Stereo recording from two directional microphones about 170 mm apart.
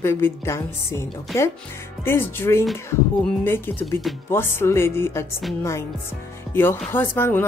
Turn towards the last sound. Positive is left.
turn(degrees=15)  # may be behind; listen again after turning